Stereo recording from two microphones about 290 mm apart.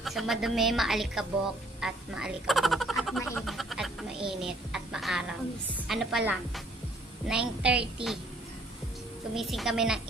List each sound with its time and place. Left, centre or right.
0.0 s a woman's voice: centre
9.3 s a woman's voice: centre